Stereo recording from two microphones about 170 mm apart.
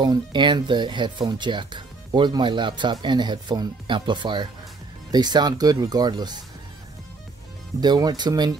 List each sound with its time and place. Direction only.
0.0 s speech: 25° right (ahead or behind)
7.8 s speech: 25° right (ahead or behind)